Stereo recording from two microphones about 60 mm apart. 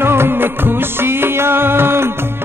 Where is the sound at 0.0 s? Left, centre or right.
Right.